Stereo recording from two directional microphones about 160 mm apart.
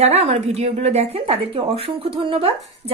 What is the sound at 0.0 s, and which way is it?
Speech, 40° right (ahead or behind).